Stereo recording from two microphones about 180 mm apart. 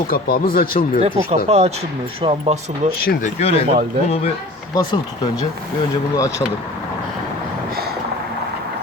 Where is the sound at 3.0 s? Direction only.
55° left (ahead or behind).